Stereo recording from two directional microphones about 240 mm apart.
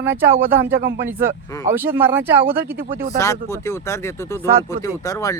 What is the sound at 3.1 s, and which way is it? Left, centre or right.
Speech, centre.